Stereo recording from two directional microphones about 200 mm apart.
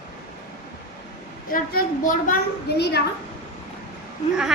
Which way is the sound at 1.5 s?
45° left (ahead or behind).